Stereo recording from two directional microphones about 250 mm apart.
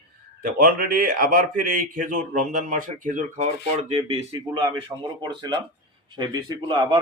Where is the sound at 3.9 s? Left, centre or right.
Right.